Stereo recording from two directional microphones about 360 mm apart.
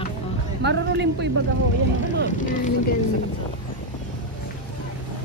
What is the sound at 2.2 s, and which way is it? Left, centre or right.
Speech, left.